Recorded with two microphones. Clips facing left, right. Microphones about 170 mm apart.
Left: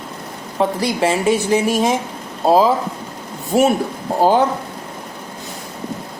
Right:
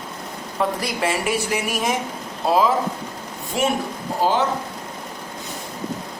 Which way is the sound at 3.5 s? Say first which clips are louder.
Left 7 dB; 40° left (ahead or behind).